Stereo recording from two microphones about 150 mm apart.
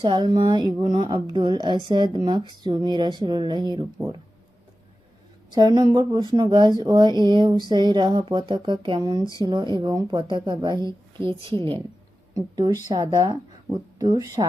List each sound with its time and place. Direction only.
0.0 s a woman's voice: 30° right (ahead or behind)
5.5 s speech: 30° right (ahead or behind)